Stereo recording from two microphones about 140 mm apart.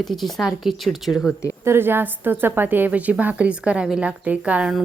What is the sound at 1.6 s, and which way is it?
A woman's voice, 15° right (ahead or behind).